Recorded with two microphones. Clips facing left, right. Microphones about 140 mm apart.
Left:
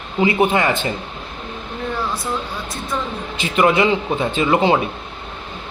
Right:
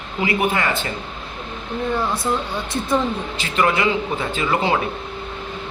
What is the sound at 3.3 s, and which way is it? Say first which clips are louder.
A man's voice: left 6 dB; 20° left (ahead or behind).